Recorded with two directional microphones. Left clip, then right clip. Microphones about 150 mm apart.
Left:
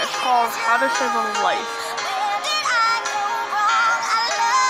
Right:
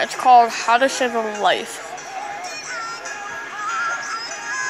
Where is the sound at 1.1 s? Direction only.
15° left (ahead or behind).